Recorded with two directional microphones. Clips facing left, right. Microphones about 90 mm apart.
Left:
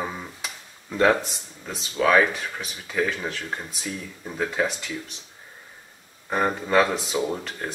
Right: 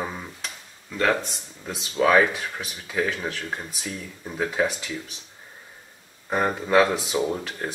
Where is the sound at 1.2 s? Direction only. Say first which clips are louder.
Right 1 dB; centre (ahead or behind).